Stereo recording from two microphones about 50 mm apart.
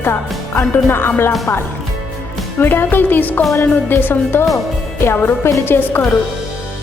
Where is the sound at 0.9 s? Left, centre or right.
Left.